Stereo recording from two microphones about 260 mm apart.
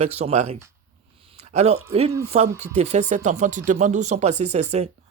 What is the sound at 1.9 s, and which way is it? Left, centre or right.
Speech, right.